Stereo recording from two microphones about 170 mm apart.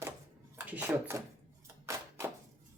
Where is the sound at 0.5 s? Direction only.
10° right (ahead or behind).